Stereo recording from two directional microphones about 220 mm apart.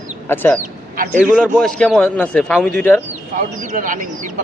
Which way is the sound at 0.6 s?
35° right (ahead or behind).